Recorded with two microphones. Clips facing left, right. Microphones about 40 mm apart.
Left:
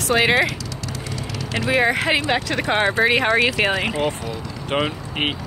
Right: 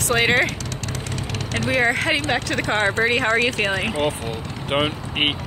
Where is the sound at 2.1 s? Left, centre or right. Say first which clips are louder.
Left 1 dB; left.